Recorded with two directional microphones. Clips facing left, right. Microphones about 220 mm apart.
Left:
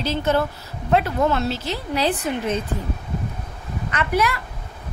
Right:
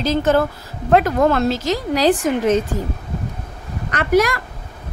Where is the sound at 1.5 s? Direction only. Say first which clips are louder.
Right 6 dB; 90° right.